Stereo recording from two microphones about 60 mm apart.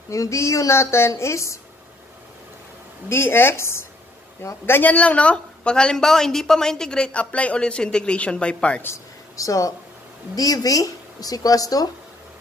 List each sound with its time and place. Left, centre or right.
0.1 s a woman's voice: left
3.1 s speech: left
4.6 s a woman's voice: left
9.4 s speech: left
10.3 s speech: left